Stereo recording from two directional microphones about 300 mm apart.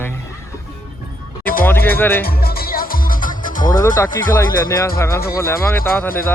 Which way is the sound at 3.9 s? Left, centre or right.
Centre.